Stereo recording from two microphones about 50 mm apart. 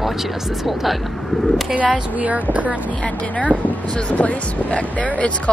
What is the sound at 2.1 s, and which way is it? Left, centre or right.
Speech, right.